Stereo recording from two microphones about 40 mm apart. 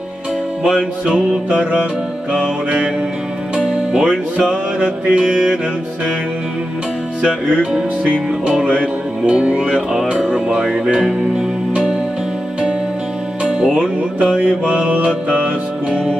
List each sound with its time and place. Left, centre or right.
0.7 s music: centre
2.3 s music: right
7.7 s music: right
13.4 s music: right